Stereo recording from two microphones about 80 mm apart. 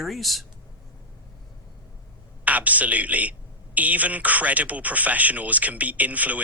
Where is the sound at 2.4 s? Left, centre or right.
Centre.